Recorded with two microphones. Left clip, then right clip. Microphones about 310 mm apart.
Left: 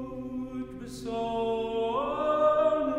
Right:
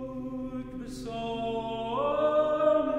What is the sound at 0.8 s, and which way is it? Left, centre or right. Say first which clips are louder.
Music: left 4 dB; left.